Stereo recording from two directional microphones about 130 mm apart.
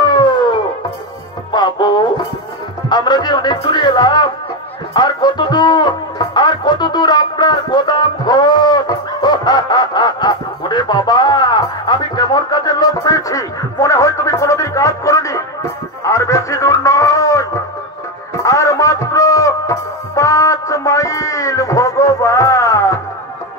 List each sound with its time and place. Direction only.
0.0 s music: 35° left (ahead or behind)
2.9 s music: 35° left (ahead or behind)
4.9 s speech: 35° left (ahead or behind)
16.0 s a sound: 25° left (ahead or behind)
18.4 s music: 25° left (ahead or behind)